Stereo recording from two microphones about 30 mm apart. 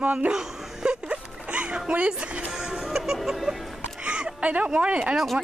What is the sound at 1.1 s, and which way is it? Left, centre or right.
Music, right.